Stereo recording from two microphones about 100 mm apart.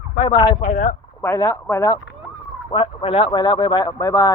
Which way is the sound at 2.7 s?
60° left (ahead or behind).